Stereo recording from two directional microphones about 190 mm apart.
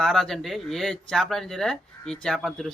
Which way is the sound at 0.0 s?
Centre (ahead or behind).